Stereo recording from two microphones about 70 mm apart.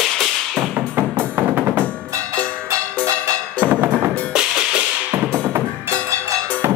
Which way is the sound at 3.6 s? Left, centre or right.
Right.